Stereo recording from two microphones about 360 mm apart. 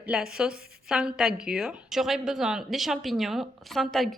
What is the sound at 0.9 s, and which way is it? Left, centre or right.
A woman's voice, centre.